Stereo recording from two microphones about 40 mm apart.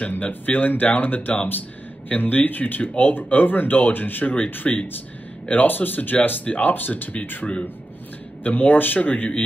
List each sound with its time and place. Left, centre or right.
0.1 s speech: left
5.5 s speech: left
6.9 s speech: left
8.5 s speech: left